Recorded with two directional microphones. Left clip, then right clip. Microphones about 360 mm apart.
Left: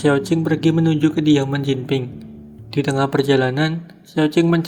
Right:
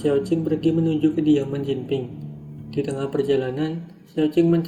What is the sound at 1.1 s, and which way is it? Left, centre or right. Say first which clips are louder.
Speech: left 3 dB; left.